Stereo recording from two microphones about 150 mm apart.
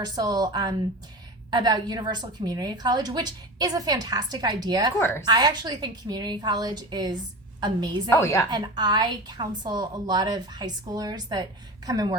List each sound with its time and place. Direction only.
0.0 s a woman's voice: 25° right (ahead or behind)
8.1 s a woman's voice: 20° left (ahead or behind)
8.4 s a woman's voice: 30° right (ahead or behind)